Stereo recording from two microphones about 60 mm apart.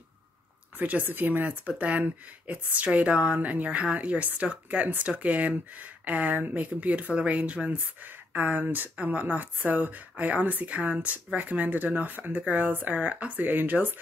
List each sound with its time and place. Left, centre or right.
0.7 s speech: right